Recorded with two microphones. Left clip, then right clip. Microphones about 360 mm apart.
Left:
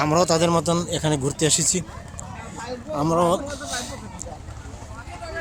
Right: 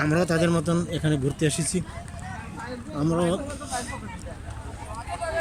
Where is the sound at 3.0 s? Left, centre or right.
Centre.